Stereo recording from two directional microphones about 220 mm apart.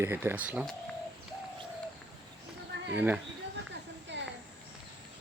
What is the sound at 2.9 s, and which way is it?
Speech, 5° right (ahead or behind).